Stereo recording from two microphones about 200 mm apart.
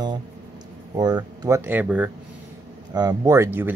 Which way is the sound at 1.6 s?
10° right (ahead or behind).